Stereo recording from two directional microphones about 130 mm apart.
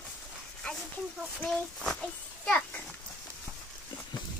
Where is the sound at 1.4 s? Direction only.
Centre (ahead or behind).